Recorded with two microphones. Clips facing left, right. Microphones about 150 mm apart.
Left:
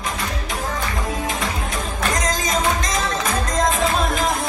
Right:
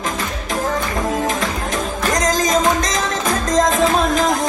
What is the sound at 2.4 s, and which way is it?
Music, 45° right (ahead or behind).